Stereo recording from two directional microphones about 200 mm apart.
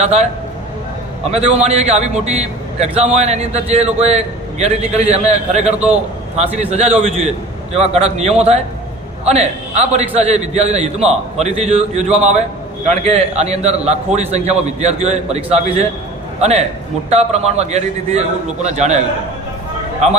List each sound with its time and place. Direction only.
0.0 s a man's voice: 35° right (ahead or behind)
1.3 s a man's voice: 35° right (ahead or behind)